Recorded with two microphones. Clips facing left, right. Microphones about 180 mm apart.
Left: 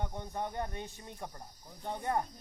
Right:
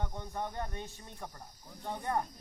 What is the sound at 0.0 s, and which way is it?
Speech, 15° left (ahead or behind).